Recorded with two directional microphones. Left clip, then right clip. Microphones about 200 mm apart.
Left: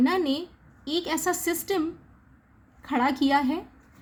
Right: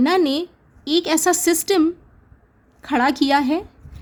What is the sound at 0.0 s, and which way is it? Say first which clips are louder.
A woman's voice: right 7 dB; 45° right (ahead or behind).